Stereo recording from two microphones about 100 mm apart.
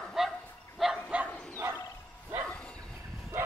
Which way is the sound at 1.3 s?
15° left (ahead or behind).